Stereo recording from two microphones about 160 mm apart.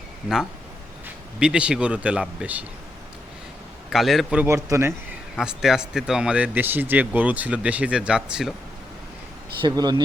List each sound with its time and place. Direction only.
1.0 s speech: 5° right (ahead or behind)
3.8 s a man's voice: centre (ahead or behind)
4.4 s speech: 15° right (ahead or behind)
5.4 s speech: 5° right (ahead or behind)
9.6 s speech: 25° right (ahead or behind)